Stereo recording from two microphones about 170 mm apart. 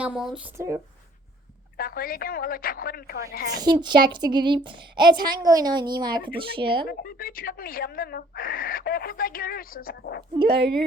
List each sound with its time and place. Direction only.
0.0 s speech: 5° right (ahead or behind)
0.5 s speech: 15° right (ahead or behind)
1.8 s speech: 60° left (ahead or behind)
3.6 s a woman's voice: 25° right (ahead or behind)
6.8 s speech: 60° left (ahead or behind)
10.5 s speech: 80° right